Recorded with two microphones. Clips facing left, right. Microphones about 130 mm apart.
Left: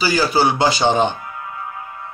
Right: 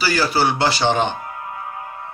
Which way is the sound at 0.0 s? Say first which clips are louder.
Left 2 dB; 15° left (ahead or behind).